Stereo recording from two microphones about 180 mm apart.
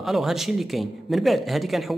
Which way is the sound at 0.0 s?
Centre (ahead or behind).